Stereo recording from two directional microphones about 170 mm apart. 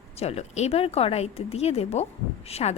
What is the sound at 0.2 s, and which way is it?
A woman's voice, 40° left (ahead or behind).